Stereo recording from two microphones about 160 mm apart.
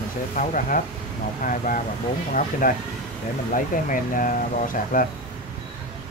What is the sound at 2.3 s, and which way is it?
Speech, 60° left (ahead or behind).